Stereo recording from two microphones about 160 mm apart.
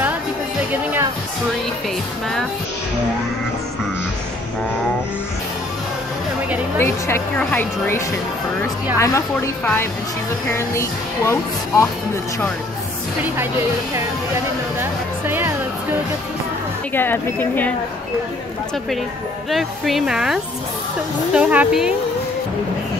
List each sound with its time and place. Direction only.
6.8 s speech: 15° left (ahead or behind)
10.5 s speech: 15° left (ahead or behind)
14.8 s music: 15° right (ahead or behind)
16.9 s speech: 15° left (ahead or behind)
19.5 s speech: centre (ahead or behind)